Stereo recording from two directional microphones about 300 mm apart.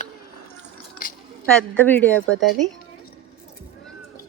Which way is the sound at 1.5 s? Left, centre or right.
Centre.